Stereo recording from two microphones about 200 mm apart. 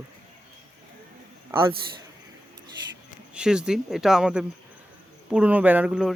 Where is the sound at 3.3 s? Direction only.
5° right (ahead or behind).